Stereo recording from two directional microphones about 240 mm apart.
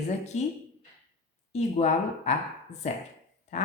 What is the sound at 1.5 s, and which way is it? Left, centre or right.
A woman's voice, left.